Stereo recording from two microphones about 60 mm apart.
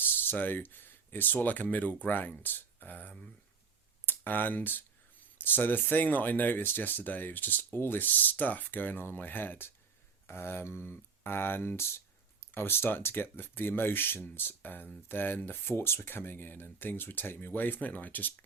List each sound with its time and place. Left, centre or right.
0.0 s speech: left